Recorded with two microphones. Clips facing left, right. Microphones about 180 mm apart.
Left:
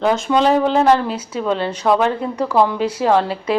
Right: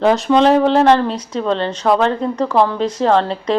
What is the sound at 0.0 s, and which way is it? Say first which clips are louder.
Speech: right 3 dB; 5° left (ahead or behind).